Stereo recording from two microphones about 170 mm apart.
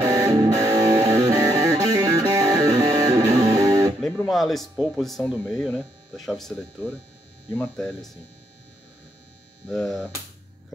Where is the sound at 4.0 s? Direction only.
10° left (ahead or behind).